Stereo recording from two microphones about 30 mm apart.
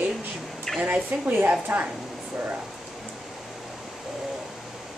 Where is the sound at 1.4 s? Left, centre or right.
Right.